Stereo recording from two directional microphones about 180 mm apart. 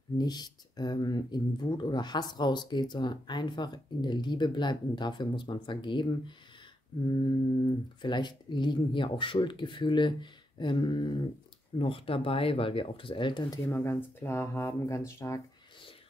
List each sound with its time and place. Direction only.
0.2 s speech: 20° left (ahead or behind)
8.0 s speech: 25° left (ahead or behind)
13.7 s speech: 10° left (ahead or behind)